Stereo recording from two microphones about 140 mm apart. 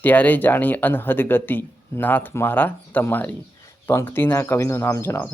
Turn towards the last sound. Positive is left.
turn(degrees=20)  # may be behind; listen again after turning